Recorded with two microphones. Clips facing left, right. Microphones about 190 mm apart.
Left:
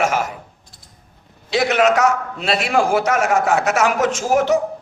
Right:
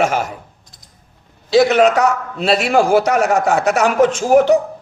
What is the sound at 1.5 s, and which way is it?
A man's voice, 35° right (ahead or behind).